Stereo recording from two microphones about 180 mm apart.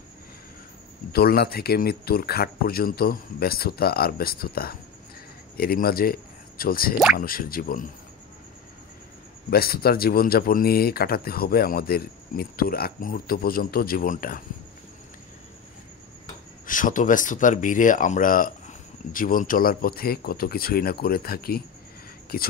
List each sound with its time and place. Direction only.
1.1 s speech: 60° left (ahead or behind)
9.5 s speech: 55° left (ahead or behind)
16.6 s speech: 50° left (ahead or behind)